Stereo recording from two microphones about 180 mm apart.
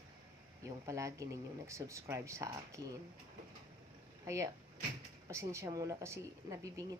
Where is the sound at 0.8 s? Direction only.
15° right (ahead or behind).